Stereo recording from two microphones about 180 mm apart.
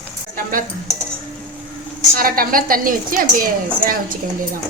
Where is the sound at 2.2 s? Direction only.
55° right (ahead or behind).